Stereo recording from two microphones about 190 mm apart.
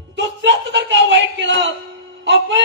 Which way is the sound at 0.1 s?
70° right (ahead or behind).